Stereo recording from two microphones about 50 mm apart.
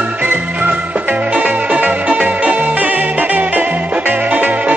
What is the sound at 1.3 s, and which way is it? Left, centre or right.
Music, right.